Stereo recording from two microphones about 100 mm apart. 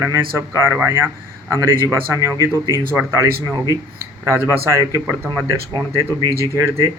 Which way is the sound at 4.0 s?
25° right (ahead or behind).